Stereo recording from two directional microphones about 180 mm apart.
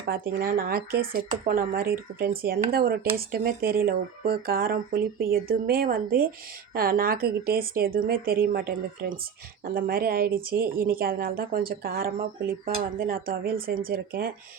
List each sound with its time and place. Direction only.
0.1 s speech: 55° right (ahead or behind)